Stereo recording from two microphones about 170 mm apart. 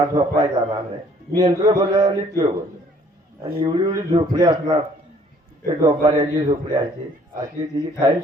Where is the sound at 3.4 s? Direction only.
30° right (ahead or behind).